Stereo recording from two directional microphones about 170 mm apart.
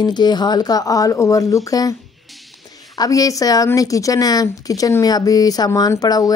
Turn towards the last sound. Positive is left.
turn(degrees=20)  # may be behind; listen again after turning